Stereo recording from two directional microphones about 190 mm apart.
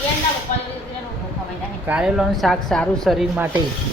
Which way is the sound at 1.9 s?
5° right (ahead or behind).